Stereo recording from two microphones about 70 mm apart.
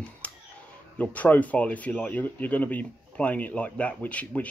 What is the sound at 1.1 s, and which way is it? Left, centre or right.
Speech, left.